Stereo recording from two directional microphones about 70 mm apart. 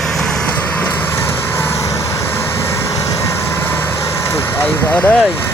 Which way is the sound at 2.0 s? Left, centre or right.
Left.